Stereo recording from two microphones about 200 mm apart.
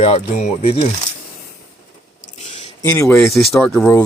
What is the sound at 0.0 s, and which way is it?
Speech, 35° left (ahead or behind).